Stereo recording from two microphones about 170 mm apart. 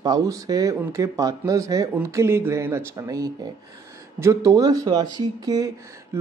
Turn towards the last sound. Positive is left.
turn(degrees=-20)  # may be behind; listen again after turning